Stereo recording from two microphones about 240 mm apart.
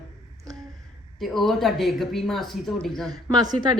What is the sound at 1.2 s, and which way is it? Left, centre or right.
A woman's voice, centre.